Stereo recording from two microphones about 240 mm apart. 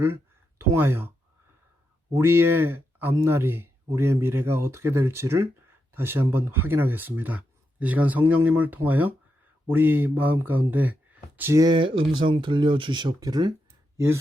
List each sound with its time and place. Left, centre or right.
0.7 s speech: centre
2.1 s speech: centre